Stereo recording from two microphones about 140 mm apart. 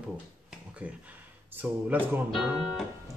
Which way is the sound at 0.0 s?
10° right (ahead or behind).